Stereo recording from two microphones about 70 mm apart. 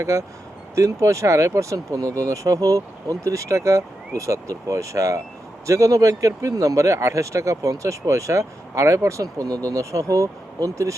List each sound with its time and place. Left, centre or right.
0.0 s speech: right
9.2 s speech: right
9.6 s speech: right